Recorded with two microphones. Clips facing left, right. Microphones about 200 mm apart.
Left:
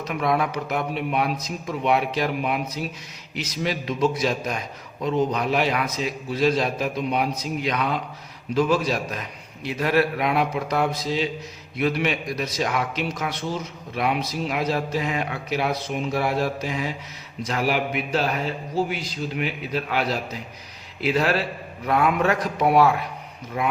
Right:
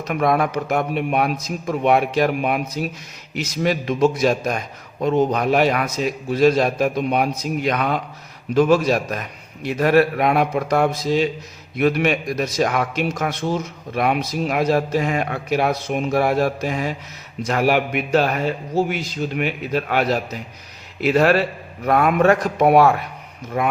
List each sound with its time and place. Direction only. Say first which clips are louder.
0.1 s a man's voice: right 5 dB; 50° right (ahead or behind)